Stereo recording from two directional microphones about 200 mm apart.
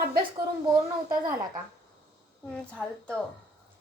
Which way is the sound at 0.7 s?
20° right (ahead or behind).